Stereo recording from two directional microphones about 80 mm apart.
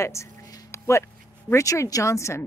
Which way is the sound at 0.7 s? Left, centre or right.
Left.